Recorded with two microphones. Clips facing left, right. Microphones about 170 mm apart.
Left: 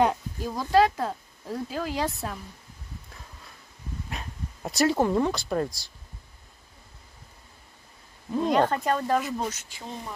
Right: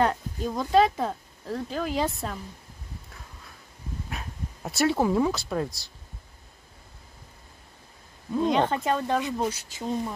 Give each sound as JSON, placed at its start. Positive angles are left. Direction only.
{"t": 0.0, "sound": "speech", "side_deg": 10}
{"t": 4.1, "sound": "speech", "side_deg": 0}
{"t": 8.4, "sound": "speech", "side_deg": 0}